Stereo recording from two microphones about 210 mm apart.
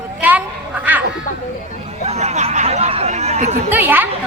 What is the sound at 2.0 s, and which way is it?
Speech, 30° right (ahead or behind).